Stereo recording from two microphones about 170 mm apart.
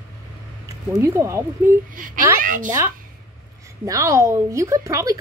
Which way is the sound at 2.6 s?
15° right (ahead or behind).